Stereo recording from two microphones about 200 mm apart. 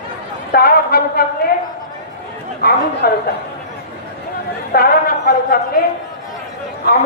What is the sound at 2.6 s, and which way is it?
Speech, 50° left (ahead or behind).